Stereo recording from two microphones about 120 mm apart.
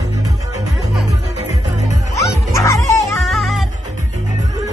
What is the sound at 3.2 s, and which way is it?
Music, centre (ahead or behind).